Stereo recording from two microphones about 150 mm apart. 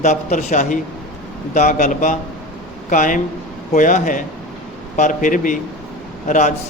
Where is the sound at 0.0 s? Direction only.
50° left (ahead or behind).